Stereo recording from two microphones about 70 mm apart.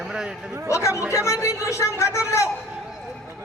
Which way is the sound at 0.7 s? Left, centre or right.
Left.